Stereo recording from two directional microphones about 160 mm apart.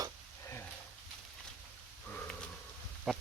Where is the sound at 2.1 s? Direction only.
5° left (ahead or behind).